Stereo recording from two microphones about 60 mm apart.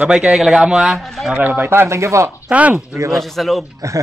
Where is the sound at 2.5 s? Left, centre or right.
Right.